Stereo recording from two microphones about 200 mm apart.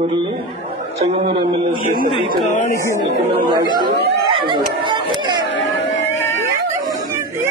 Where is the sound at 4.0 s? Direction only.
25° right (ahead or behind).